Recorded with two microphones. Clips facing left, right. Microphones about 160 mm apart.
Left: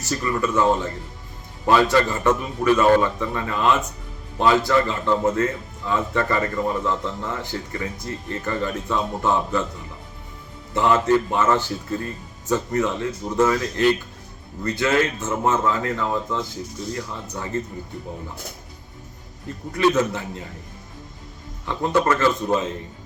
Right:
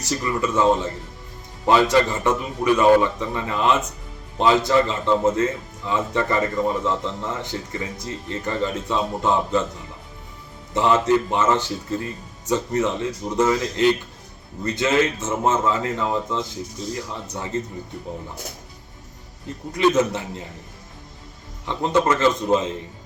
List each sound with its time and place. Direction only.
0.0 s a man's voice: 20° right (ahead or behind)
10.8 s a man's voice: 20° right (ahead or behind)
19.7 s a man's voice: 20° right (ahead or behind)
21.7 s a man's voice: 20° right (ahead or behind)